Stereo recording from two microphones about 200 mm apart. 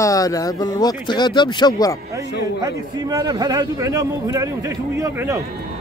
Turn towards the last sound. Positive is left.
turn(degrees=-15)  # may be behind; listen again after turning